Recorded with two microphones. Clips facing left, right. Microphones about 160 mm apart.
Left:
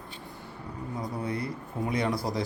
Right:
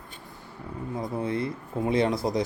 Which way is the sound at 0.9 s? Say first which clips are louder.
Right 4 dB; 25° right (ahead or behind).